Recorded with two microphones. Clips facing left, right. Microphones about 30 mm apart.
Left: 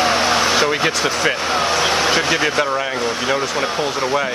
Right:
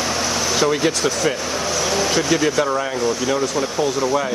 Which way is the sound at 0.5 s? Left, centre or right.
Left.